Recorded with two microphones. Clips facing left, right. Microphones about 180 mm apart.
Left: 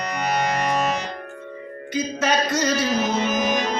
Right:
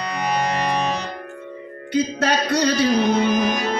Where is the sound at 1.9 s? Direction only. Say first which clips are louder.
Right 2 dB; 65° right (ahead or behind).